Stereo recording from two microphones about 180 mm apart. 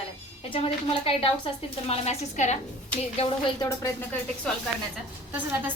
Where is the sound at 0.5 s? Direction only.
30° left (ahead or behind).